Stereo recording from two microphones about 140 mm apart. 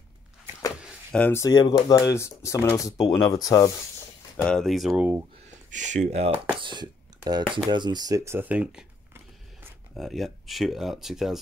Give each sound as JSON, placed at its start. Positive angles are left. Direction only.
{"t": 1.1, "sound": "speech", "side_deg": 10}
{"t": 1.4, "sound": "speech", "side_deg": 30}
{"t": 4.4, "sound": "speech", "side_deg": 5}
{"t": 5.7, "sound": "speech", "side_deg": -60}
{"t": 6.6, "sound": "speech", "side_deg": -35}
{"t": 9.9, "sound": "speech", "side_deg": 0}